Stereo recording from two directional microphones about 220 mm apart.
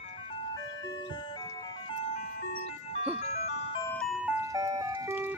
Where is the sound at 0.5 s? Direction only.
20° left (ahead or behind).